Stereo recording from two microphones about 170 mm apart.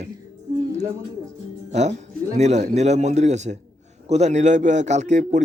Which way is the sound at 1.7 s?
40° right (ahead or behind).